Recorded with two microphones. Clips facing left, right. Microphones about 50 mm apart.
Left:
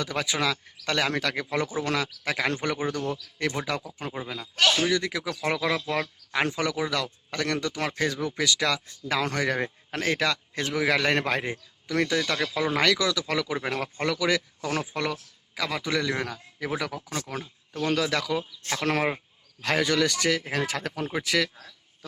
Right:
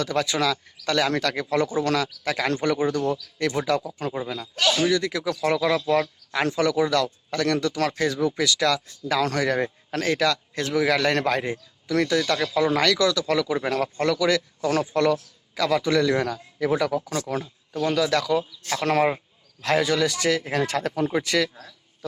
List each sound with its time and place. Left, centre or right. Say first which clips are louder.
0.0 s speech: right 4 dB; centre
1.1 s a man's voice: right 4 dB; centre
6.4 s speech: right 5 dB; left
6.7 s a man's voice: right 7 dB; centre
7.3 s speech: right 5 dB; left
12.2 s a man's voice: right 4 dB; centre
18.7 s speech: right 4 dB; centre